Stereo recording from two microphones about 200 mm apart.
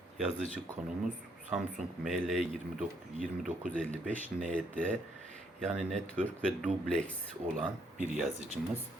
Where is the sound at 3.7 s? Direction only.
5° left (ahead or behind).